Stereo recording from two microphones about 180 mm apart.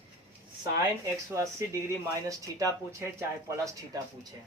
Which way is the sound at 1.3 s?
15° right (ahead or behind).